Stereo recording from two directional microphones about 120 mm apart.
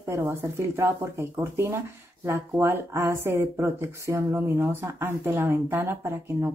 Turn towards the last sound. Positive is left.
turn(degrees=-20)  # may be behind; listen again after turning